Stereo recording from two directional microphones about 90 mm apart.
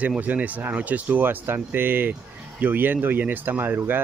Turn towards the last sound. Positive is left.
turn(degrees=-20)  # may be behind; listen again after turning